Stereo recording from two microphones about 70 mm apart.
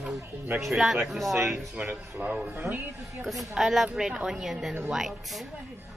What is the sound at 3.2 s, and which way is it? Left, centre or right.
A woman's voice, centre.